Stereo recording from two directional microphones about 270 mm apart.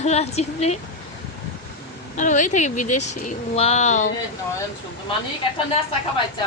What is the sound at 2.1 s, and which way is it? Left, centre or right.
Speech, left.